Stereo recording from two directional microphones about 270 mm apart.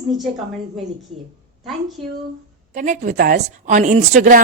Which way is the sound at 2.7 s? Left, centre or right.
Right.